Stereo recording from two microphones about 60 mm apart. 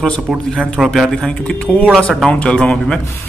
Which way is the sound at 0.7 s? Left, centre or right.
Centre.